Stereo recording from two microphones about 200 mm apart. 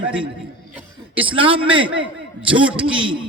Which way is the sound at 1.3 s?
25° right (ahead or behind).